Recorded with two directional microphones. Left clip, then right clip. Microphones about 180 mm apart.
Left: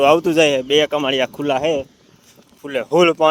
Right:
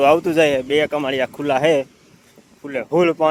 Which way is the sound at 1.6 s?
15° right (ahead or behind).